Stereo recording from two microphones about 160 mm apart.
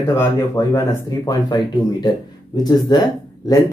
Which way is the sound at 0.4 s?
20° left (ahead or behind).